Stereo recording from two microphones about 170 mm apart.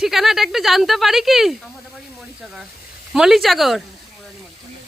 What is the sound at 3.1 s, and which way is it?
Speech, centre (ahead or behind).